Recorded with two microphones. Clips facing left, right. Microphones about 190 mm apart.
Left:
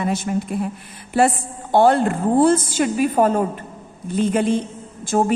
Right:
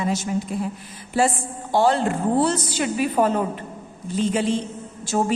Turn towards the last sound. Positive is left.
turn(degrees=50)  # may be behind; listen again after turning